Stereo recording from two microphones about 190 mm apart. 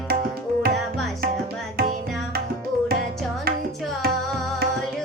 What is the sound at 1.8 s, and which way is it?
Tabla, 55° right (ahead or behind).